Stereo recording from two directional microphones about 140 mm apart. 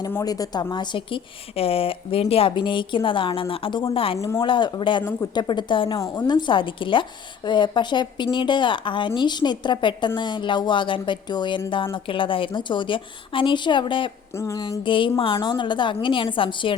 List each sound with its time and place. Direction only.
0.1 s a woman's voice: 25° left (ahead or behind)
6.0 s a woman's voice: 25° left (ahead or behind)
14.3 s a sound: 20° left (ahead or behind)
14.8 s a woman's voice: 35° left (ahead or behind)